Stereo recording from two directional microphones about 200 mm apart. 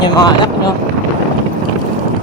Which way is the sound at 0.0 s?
20° left (ahead or behind).